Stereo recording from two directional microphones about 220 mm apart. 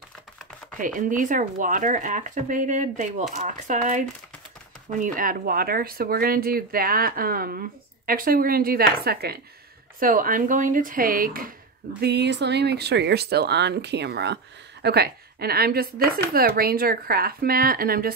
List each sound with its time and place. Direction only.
0.7 s speech: 35° right (ahead or behind)
5.0 s speech: 40° right (ahead or behind)